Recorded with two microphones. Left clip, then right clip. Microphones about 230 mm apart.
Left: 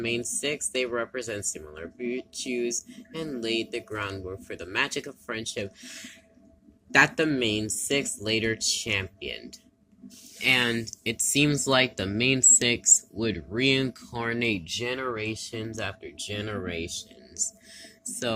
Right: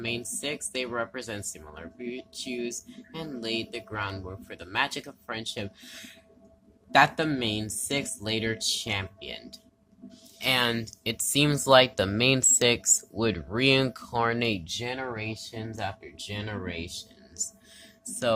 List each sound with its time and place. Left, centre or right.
0.0 s speech: centre